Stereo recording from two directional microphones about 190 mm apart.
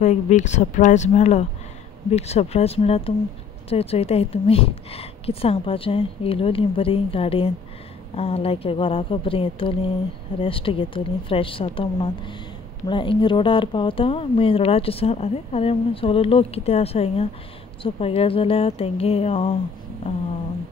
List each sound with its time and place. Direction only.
0.0 s speech: 40° left (ahead or behind)